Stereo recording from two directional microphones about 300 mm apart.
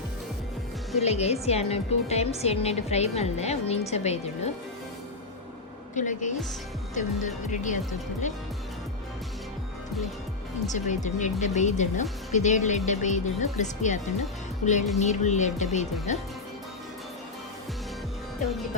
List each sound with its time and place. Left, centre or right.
0.9 s speech: left
5.9 s speech: left
10.7 s speech: left